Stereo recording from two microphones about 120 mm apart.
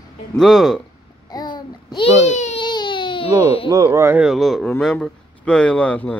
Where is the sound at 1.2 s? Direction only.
35° left (ahead or behind).